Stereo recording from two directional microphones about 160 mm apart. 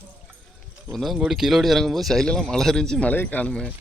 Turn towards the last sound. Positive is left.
turn(degrees=5)  # may be behind; listen again after turning